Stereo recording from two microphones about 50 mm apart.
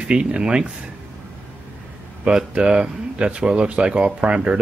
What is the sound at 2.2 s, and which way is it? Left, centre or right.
Speech, right.